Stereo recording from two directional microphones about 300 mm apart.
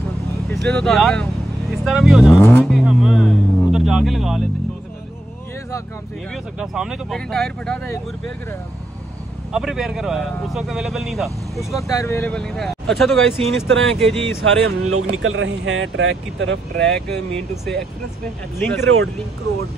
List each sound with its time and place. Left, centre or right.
0.5 s speech: centre
6.3 s a man's voice: centre
9.5 s a man's voice: centre
14.4 s speech: right
18.6 s a man's voice: centre